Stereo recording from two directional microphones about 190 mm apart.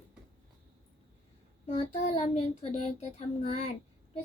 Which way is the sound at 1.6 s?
35° left (ahead or behind).